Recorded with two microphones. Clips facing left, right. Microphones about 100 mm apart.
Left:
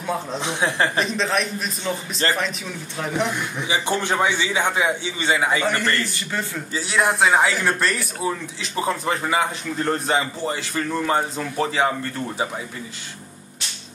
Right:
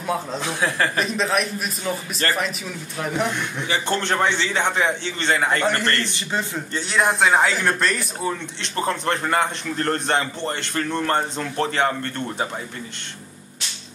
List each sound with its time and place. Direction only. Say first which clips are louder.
0.0 s speech: right 1 dB; centre (ahead or behind)
0.4 s speech: left 1 dB; 20° left (ahead or behind)
0.9 s speech: even; 5° right (ahead or behind)
2.2 s speech: left 1 dB; 25° left (ahead or behind)
3.0 s a man's voice: even; centre (ahead or behind)